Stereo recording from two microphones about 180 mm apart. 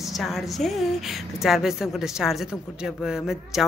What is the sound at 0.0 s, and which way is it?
A woman's voice, centre (ahead or behind).